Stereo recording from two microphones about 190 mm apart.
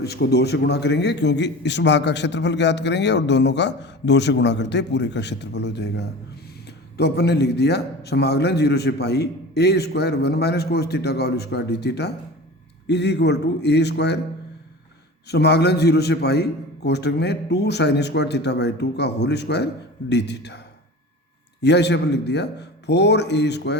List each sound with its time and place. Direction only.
0.0 s a man's voice: 60° left (ahead or behind)
15.3 s a man's voice: 60° left (ahead or behind)
21.6 s a man's voice: 65° left (ahead or behind)